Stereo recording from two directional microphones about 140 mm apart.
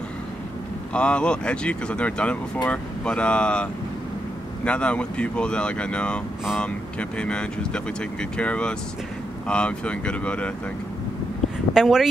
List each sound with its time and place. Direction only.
0.9 s speech: 5° left (ahead or behind)
4.6 s speech: 10° left (ahead or behind)
11.7 s speech: 5° right (ahead or behind)